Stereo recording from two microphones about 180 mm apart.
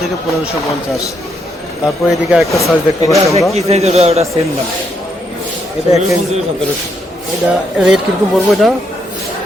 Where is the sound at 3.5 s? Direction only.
35° right (ahead or behind).